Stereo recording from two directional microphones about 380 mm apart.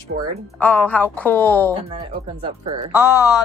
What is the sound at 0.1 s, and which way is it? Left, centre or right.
Speech, right.